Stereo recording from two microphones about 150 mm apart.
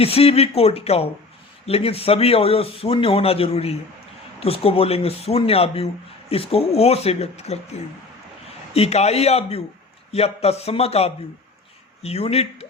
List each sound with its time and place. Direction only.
0.0 s a man's voice: 40° left (ahead or behind)